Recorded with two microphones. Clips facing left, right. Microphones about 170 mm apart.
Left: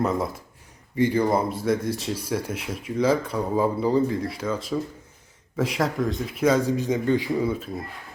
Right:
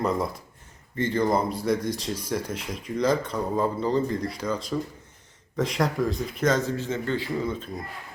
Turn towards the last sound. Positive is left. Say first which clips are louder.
# left 4 dB
turn(degrees=5)  # may be behind; listen again after turning